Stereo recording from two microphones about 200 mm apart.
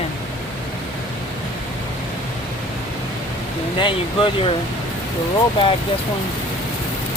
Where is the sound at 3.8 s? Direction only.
25° left (ahead or behind).